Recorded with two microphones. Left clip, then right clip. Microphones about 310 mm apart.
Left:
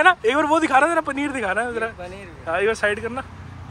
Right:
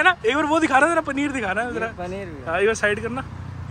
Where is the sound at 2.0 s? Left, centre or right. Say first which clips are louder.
Right 5 dB; right.